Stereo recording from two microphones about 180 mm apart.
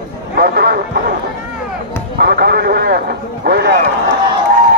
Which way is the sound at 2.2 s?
60° right (ahead or behind).